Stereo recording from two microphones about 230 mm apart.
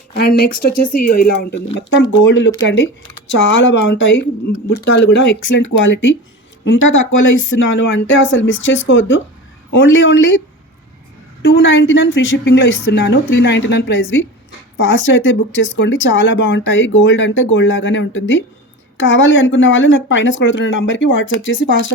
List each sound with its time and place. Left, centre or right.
0.1 s a woman's voice: left
11.4 s a woman's voice: left